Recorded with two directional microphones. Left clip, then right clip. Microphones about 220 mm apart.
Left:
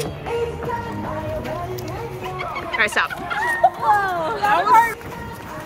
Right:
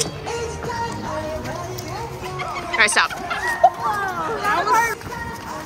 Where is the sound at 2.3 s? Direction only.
Centre (ahead or behind).